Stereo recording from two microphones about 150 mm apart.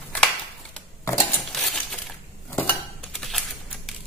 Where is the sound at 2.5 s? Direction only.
15° left (ahead or behind).